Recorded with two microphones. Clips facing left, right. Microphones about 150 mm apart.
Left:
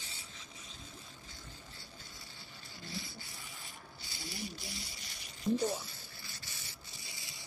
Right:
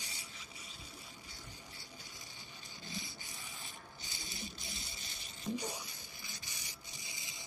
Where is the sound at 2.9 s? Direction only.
20° right (ahead or behind).